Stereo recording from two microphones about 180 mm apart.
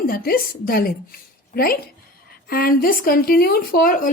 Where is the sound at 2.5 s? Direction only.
55° left (ahead or behind).